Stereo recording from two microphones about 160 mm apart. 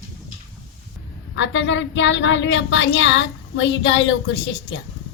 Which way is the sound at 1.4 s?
90° left.